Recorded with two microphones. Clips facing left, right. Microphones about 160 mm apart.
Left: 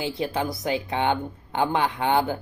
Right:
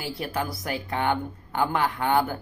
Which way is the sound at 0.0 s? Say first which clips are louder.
Left 3 dB; 20° left (ahead or behind).